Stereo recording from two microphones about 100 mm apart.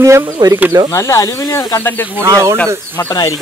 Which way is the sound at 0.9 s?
30° left (ahead or behind).